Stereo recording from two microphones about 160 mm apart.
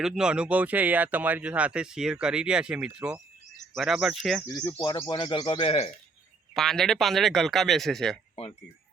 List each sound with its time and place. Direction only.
0.0 s a man's voice: 5° right (ahead or behind)
4.4 s speech: 20° left (ahead or behind); by 5.9 s 40° left (ahead or behind)
6.5 s a man's voice: centre (ahead or behind)